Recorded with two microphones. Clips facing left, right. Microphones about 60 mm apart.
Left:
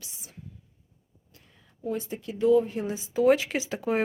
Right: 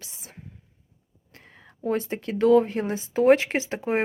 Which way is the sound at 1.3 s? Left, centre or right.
Right.